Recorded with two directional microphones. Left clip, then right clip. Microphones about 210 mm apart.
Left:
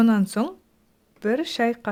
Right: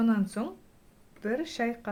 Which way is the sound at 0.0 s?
55° left (ahead or behind).